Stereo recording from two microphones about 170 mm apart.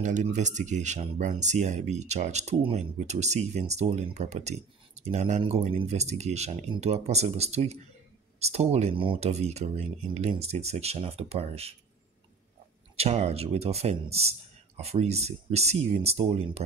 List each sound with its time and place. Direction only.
0.0 s speech: 45° right (ahead or behind)
12.9 s speech: 35° right (ahead or behind)